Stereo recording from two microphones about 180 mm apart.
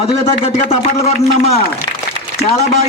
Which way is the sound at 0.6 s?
35° left (ahead or behind).